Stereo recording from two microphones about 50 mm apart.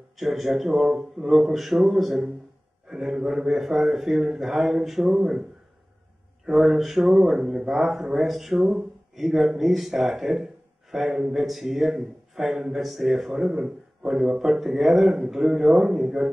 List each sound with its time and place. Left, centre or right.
0.2 s a man's voice: centre
6.4 s a man's voice: centre